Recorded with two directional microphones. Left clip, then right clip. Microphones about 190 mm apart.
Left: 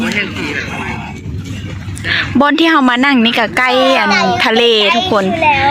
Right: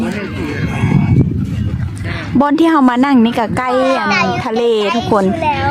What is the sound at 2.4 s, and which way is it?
Speech, 15° right (ahead or behind).